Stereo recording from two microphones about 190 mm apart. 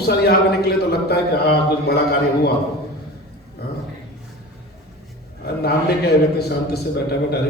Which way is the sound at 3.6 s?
60° left (ahead or behind).